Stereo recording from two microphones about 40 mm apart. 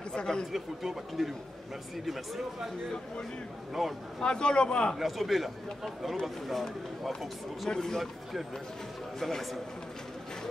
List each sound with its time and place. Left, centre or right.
0.5 s speech: centre
3.8 s speech: centre
4.2 s speech: left
4.9 s speech: centre
7.7 s a man's voice: centre
8.0 s speech: centre